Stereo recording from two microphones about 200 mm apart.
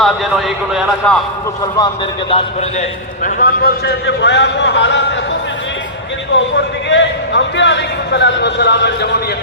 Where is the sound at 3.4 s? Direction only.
50° left (ahead or behind).